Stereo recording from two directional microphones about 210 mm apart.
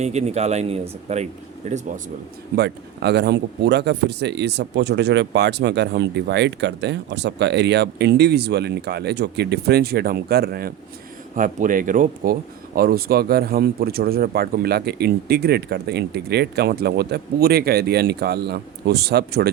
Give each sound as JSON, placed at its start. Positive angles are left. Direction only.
{"t": 0.0, "sound": "speech", "side_deg": -30}
{"t": 2.6, "sound": "speech", "side_deg": -55}